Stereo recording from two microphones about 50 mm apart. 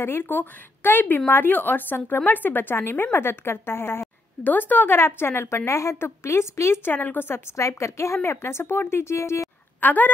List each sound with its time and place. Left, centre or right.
0.0 s speech: left
4.5 s a woman's voice: left
4.9 s a woman's voice: left
5.7 s a woman's voice: left
5.9 s a woman's voice: left
6.8 s speech: left
7.5 s a woman's voice: left
8.3 s a woman's voice: left
9.8 s speech: left